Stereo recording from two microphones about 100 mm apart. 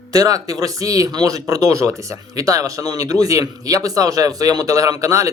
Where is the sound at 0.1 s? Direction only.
35° right (ahead or behind).